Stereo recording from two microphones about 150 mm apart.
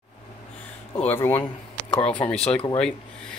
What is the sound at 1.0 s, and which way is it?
Speech, 15° left (ahead or behind).